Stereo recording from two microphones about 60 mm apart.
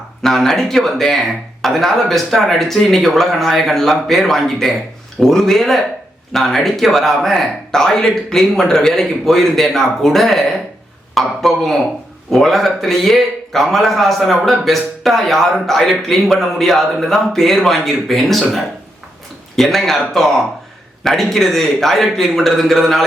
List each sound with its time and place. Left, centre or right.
0.2 s speech: centre